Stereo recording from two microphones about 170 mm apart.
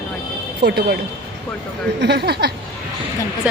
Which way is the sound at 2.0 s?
80° right.